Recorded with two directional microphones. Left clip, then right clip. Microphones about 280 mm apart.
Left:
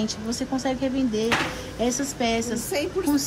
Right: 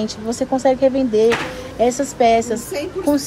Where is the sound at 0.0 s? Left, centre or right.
Centre.